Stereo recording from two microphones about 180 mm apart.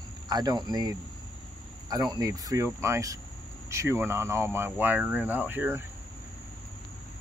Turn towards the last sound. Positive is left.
turn(degrees=-10)  # may be behind; listen again after turning